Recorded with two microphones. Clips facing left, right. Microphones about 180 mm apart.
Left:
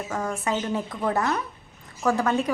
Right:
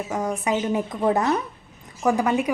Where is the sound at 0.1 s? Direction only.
15° right (ahead or behind).